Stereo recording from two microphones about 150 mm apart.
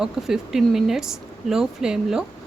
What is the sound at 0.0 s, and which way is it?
Speech, 5° right (ahead or behind).